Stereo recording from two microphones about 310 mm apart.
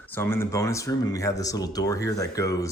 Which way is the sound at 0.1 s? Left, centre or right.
Centre.